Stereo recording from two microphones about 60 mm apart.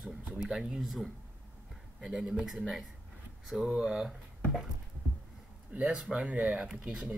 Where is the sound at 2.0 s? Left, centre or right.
Centre.